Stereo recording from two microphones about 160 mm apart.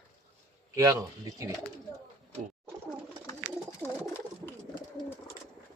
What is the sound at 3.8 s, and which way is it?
Bird, 15° left (ahead or behind).